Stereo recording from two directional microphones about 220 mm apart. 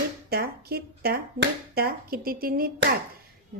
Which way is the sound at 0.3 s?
45° right (ahead or behind).